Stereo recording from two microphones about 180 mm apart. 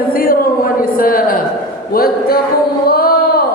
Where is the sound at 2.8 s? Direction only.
55° left (ahead or behind).